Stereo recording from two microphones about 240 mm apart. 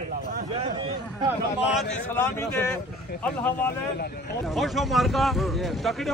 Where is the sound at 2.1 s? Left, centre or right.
Centre.